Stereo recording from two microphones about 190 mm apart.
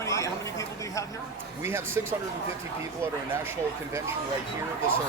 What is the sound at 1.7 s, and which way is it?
Speech, 15° right (ahead or behind).